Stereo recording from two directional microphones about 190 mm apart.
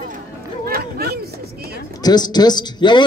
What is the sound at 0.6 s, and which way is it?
Speech, 55° right (ahead or behind).